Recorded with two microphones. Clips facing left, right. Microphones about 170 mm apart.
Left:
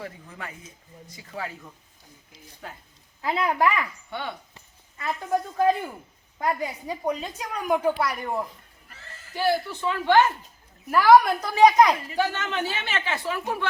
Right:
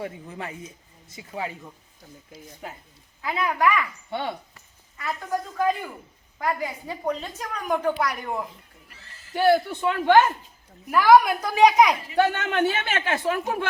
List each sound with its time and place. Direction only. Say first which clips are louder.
0.0 s speech: right 4 dB; 25° right (ahead or behind)
3.2 s speech: left 1 dB; 30° left (ahead or behind)
4.1 s speech: right 5 dB; 30° right (ahead or behind)
4.5 s speech: even; 25° left (ahead or behind)
6.4 s a woman's voice: even; 15° left (ahead or behind)
9.3 s a man's voice: right 5 dB; 55° right (ahead or behind)
10.9 s a woman's voice: even; centre (ahead or behind)
12.1 s speech: right 4 dB; 60° right (ahead or behind)